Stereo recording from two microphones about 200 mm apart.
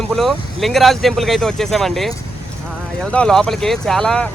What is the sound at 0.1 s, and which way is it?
Speech, centre (ahead or behind).